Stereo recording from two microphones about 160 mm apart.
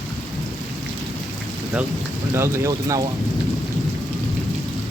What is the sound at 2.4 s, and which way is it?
Speech, 15° right (ahead or behind).